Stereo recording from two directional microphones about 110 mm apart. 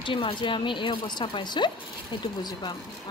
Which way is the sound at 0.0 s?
50° left (ahead or behind).